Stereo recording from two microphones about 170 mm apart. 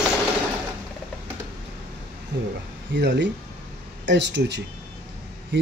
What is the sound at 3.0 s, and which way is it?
Speech, 90° right.